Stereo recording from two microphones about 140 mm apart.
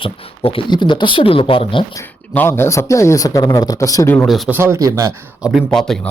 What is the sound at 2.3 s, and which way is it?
Speech, 15° left (ahead or behind).